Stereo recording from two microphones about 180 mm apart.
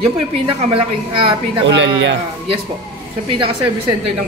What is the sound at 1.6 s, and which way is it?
Speech, 85° right.